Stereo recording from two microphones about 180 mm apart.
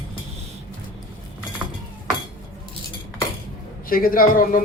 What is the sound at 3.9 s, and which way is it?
Speech, 50° left (ahead or behind).